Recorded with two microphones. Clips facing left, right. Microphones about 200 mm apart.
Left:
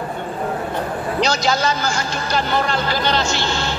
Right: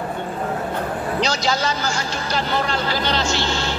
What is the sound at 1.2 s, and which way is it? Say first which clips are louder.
Speech: left 4 dB; 50° left (ahead or behind).